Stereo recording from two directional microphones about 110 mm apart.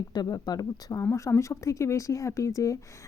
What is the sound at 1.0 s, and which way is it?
Speech, 25° left (ahead or behind).